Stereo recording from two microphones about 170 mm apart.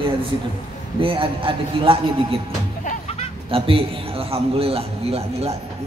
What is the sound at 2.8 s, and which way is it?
Vehicle, 45° left (ahead or behind).